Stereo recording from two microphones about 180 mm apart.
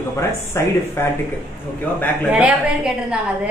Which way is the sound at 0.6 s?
15° left (ahead or behind).